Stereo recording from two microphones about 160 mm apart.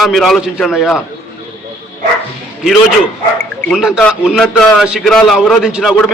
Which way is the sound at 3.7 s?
5° right (ahead or behind).